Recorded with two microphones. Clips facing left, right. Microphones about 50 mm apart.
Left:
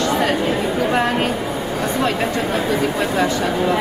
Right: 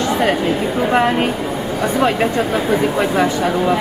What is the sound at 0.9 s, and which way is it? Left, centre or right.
Speech, centre.